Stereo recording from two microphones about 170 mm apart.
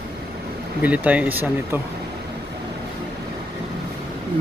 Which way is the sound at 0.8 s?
10° right (ahead or behind).